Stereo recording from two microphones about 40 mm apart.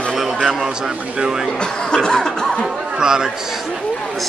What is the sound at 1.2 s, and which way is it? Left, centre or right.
Speech, centre.